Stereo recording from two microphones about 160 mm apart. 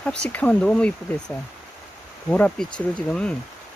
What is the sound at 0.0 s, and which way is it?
Speech, 5° left (ahead or behind).